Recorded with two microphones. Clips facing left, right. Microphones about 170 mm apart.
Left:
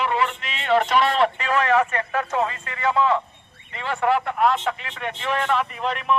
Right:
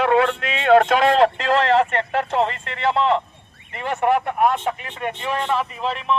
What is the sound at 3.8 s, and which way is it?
Speech, 50° right (ahead or behind).